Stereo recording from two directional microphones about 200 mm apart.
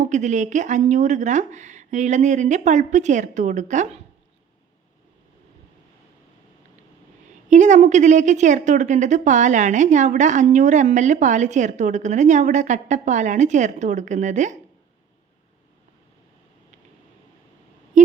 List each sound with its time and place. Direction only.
0.0 s a woman's voice: 35° right (ahead or behind)
7.5 s a woman's voice: 35° right (ahead or behind)
18.0 s a sound: 40° right (ahead or behind)